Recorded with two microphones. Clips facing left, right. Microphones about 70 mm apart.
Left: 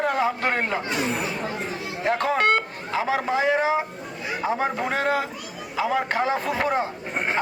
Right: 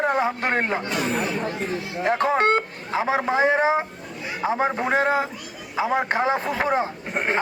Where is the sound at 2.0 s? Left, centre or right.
Right.